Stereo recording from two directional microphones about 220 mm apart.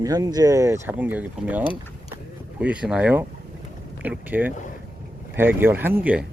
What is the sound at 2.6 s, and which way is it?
Speech, 5° right (ahead or behind).